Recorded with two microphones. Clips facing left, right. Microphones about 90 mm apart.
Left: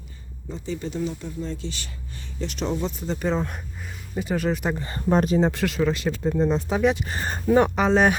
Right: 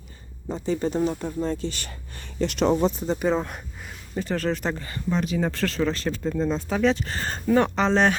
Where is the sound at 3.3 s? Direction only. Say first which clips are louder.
Left 2 dB; centre (ahead or behind).